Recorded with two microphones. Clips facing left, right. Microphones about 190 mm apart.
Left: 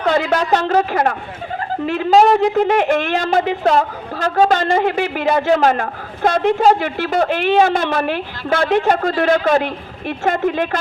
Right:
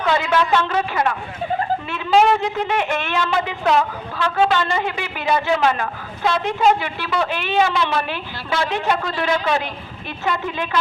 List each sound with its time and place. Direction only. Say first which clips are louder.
0.0 s speech: left 2 dB; 40° left (ahead or behind)
4.9 s a woman's voice: left 5 dB; 60° left (ahead or behind)